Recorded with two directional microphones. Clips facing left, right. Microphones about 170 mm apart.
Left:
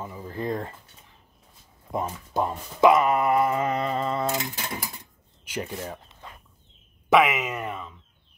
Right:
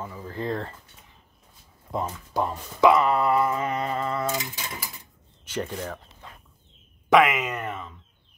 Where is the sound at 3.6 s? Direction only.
35° left (ahead or behind).